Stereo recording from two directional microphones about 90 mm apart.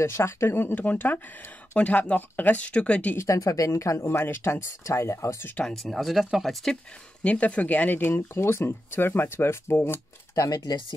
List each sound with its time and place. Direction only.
0.0 s speech: 30° left (ahead or behind); by 3.2 s 15° left (ahead or behind)
3.2 s speech: 35° left (ahead or behind)
5.5 s speech: 10° left (ahead or behind)
7.2 s speech: 15° left (ahead or behind); by 11.0 s 45° left (ahead or behind)